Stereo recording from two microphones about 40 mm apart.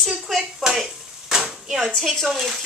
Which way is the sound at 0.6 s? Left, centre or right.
Centre.